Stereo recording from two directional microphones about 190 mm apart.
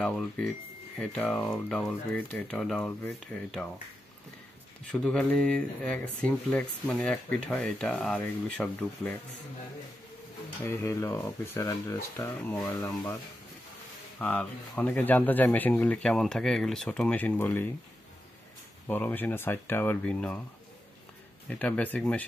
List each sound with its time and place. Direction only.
0.0 s speech: 5° left (ahead or behind)
5.0 s speech: 5° left (ahead or behind)
10.6 s speech: 10° left (ahead or behind)
12.6 s speech: 20° left (ahead or behind)
14.1 s speech: 5° left (ahead or behind)
18.9 s speech: 10° left (ahead or behind)
21.5 s speech: 5° left (ahead or behind)